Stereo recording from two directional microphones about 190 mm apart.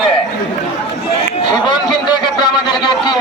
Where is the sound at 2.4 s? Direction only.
20° left (ahead or behind).